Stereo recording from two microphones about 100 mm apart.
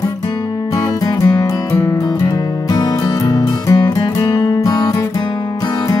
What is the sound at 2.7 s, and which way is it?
Music, 40° left (ahead or behind).